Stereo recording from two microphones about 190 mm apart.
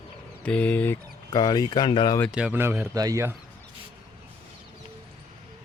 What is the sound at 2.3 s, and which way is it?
Speech, 5° right (ahead or behind).